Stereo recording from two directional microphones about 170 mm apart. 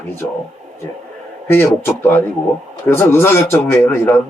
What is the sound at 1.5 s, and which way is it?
Speech, 15° left (ahead or behind).